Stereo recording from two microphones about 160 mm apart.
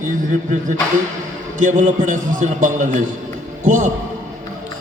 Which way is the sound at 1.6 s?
50° right (ahead or behind).